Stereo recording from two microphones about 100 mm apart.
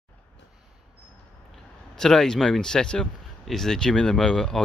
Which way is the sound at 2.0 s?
5° left (ahead or behind).